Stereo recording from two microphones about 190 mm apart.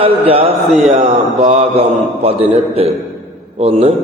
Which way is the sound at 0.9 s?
35° right (ahead or behind).